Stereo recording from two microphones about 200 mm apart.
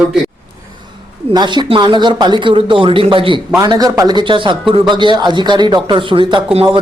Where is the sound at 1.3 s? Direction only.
20° right (ahead or behind).